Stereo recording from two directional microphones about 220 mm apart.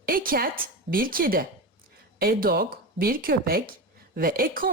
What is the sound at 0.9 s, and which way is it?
Speech, 40° right (ahead or behind).